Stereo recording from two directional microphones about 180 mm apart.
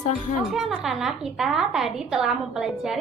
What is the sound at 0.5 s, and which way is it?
A woman's voice, centre (ahead or behind).